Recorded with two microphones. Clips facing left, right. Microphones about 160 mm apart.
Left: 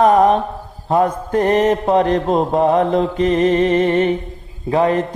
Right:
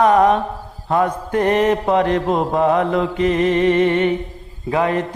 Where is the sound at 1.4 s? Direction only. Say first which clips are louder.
Left 1 dB; 25° left (ahead or behind).